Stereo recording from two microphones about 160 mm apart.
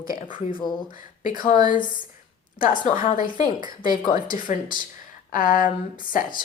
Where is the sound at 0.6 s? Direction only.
30° left (ahead or behind).